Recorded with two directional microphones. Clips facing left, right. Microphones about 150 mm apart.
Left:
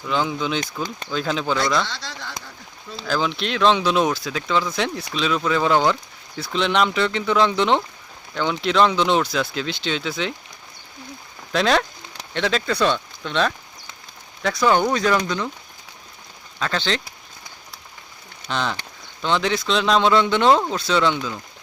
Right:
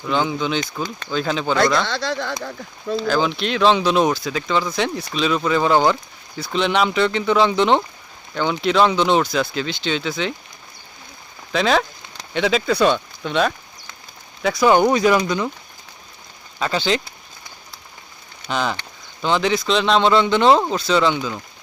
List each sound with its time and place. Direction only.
0.1 s speech: centre (ahead or behind)
1.8 s speech: 60° right (ahead or behind)
3.1 s speech: centre (ahead or behind)
11.5 s speech: centre (ahead or behind)
16.6 s speech: 10° right (ahead or behind)
18.4 s speech: 5° right (ahead or behind)